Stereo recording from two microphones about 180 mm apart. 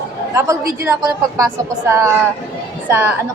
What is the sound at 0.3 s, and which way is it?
A woman's voice, 15° right (ahead or behind).